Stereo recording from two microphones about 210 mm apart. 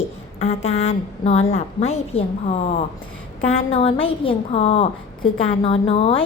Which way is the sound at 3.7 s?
25° left (ahead or behind).